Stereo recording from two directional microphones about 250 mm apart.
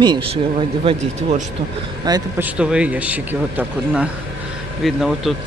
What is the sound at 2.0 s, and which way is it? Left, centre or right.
Speech, centre.